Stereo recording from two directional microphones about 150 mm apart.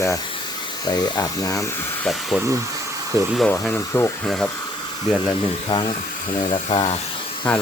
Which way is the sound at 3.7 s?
15° left (ahead or behind).